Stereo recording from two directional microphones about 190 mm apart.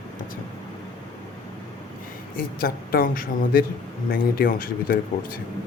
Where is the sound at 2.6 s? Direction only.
50° left (ahead or behind).